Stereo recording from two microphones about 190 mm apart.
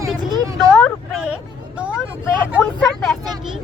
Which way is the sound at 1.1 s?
5° right (ahead or behind).